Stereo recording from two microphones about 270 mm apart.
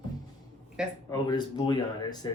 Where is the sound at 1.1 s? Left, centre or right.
Centre.